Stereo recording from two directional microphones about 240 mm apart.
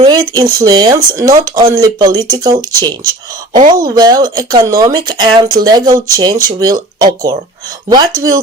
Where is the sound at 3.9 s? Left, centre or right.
Centre.